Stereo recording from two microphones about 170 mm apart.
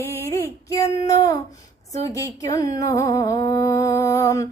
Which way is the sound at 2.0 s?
20° left (ahead or behind).